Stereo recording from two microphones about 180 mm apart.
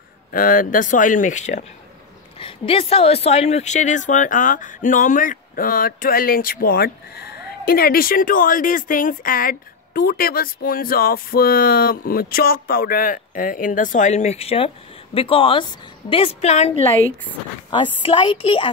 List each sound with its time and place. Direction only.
0.3 s a woman's voice: 50° left (ahead or behind)
2.3 s a woman's voice: 30° left (ahead or behind)
17.6 s a woman's voice: 25° left (ahead or behind)